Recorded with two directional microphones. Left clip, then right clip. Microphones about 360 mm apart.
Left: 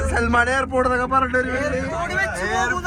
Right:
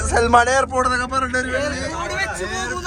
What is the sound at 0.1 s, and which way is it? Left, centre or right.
Speech, centre.